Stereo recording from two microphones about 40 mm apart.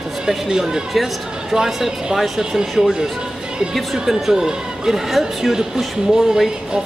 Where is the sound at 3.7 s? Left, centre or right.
Centre.